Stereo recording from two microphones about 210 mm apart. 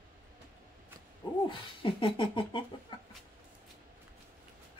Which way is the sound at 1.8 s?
25° left (ahead or behind).